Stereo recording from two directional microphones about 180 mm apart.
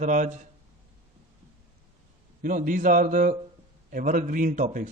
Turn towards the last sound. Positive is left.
turn(degrees=-45)  # may be behind; listen again after turning